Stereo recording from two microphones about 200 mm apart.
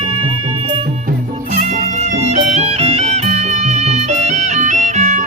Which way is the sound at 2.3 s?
35° right (ahead or behind).